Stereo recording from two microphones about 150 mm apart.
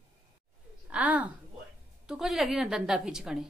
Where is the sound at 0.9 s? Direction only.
10° right (ahead or behind).